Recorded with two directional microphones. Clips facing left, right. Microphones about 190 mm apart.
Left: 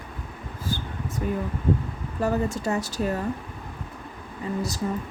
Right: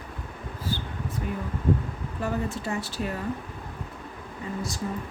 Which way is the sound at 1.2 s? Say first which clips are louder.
Left 2 dB; 40° left (ahead or behind).